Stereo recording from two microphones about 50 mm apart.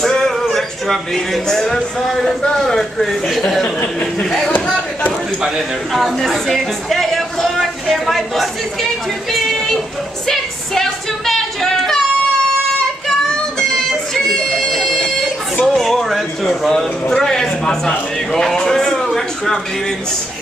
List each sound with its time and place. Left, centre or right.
0.0 s a sound: centre
0.6 s a man's voice: centre
3.6 s speech: left
4.2 s speech: centre
5.9 s speech: centre
10.2 s a sound: centre
13.6 s music: centre
15.6 s a sound: centre
16.4 s a man's voice: centre